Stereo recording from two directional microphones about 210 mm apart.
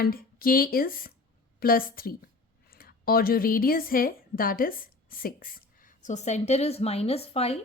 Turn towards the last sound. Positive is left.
turn(degrees=30)  # may be behind; listen again after turning